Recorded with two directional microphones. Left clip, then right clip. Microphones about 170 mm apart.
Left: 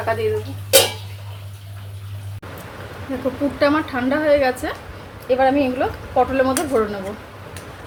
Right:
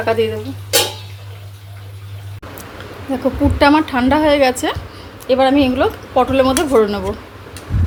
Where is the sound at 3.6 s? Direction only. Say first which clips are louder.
Right 6 dB; 50° right (ahead or behind).